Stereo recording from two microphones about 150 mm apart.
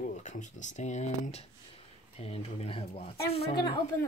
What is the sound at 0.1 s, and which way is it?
Speech, 55° left (ahead or behind).